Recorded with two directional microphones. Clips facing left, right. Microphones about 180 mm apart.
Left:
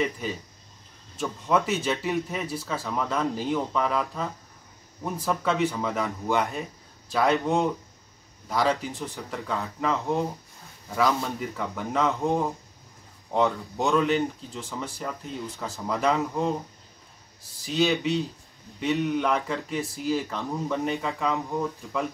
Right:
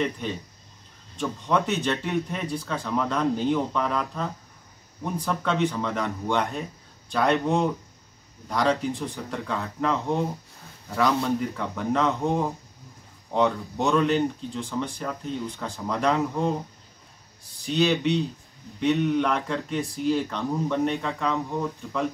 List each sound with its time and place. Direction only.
0.0 s speech: 5° left (ahead or behind)
17.6 s speech: centre (ahead or behind)